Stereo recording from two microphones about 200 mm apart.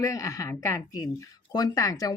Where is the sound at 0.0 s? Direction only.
15° left (ahead or behind).